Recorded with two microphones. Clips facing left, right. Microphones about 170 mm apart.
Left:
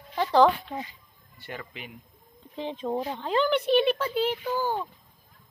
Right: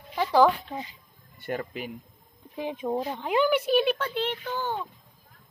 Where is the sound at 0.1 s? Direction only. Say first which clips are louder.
Even; 10° right (ahead or behind).